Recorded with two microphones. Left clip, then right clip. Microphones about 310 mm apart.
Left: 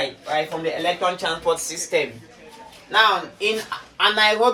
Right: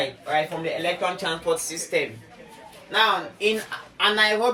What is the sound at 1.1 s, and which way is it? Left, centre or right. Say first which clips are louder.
Speech: left 3 dB; centre.